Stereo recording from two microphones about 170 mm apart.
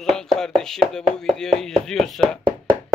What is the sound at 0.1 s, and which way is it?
Speech, 5° left (ahead or behind).